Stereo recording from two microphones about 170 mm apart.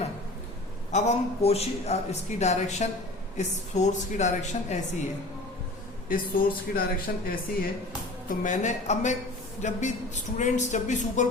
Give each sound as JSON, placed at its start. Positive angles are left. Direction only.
{"t": 0.9, "sound": "a man's voice", "side_deg": 40}
{"t": 6.1, "sound": "speech", "side_deg": 55}
{"t": 8.3, "sound": "speech", "side_deg": 45}